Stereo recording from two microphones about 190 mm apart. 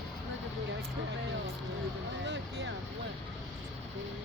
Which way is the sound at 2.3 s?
65° right (ahead or behind).